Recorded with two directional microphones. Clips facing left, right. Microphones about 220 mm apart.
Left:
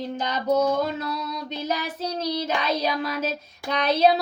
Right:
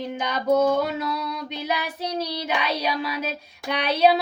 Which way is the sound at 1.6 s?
15° right (ahead or behind).